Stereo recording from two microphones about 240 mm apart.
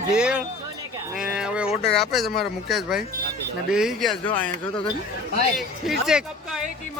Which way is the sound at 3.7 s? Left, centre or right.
Centre.